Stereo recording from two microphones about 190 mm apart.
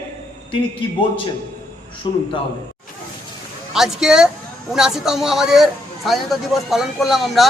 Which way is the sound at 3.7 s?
Centre (ahead or behind).